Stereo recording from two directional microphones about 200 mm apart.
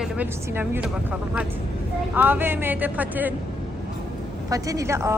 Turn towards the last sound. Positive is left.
turn(degrees=-15)  # may be behind; listen again after turning